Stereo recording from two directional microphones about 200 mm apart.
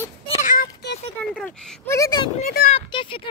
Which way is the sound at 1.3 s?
5° left (ahead or behind).